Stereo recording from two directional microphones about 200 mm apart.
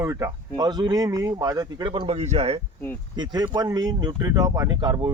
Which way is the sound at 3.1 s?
20° right (ahead or behind).